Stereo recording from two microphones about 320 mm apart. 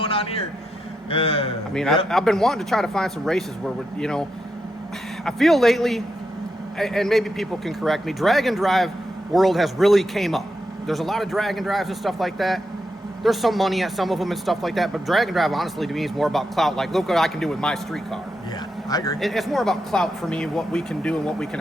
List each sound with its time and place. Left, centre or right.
0.0 s a sound: centre
1.1 s a man's voice: centre
1.7 s speech: centre
19.2 s speech: centre